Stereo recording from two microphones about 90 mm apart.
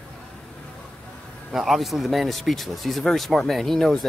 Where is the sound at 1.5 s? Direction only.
Centre (ahead or behind).